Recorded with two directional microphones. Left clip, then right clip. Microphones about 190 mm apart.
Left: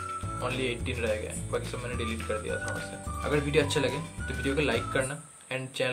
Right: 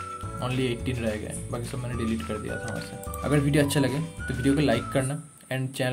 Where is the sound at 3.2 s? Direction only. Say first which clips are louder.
Right 2 dB; 45° right (ahead or behind).